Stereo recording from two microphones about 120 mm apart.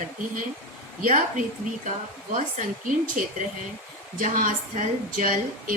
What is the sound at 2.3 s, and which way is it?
Speech, 90° right.